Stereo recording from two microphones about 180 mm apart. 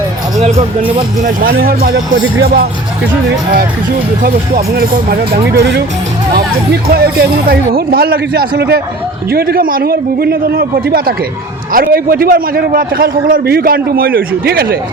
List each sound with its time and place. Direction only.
0.3 s speech: 35° right (ahead or behind)
1.2 s speech: 50° right (ahead or behind)
4.2 s speech: 55° right (ahead or behind)
5.5 s speech: 70° right (ahead or behind)
6.9 s a man's voice: 55° right (ahead or behind)